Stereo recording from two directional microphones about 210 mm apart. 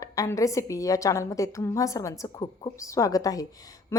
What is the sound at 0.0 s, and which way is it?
Speech, 15° left (ahead or behind).